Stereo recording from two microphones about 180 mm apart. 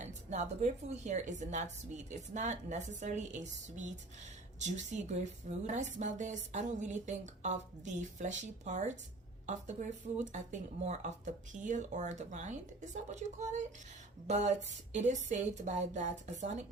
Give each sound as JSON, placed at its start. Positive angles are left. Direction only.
{"t": 0.0, "sound": "a woman's voice", "side_deg": -40}